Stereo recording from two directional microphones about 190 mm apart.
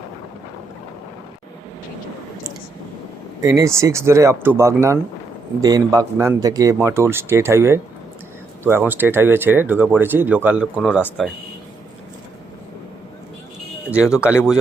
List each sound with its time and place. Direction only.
3.4 s speech: 15° right (ahead or behind)
13.9 s speech: 5° right (ahead or behind)